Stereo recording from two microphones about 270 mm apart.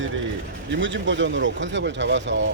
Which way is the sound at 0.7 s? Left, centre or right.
Right.